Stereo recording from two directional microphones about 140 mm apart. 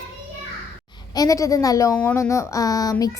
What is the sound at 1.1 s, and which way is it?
A woman's voice, 25° left (ahead or behind).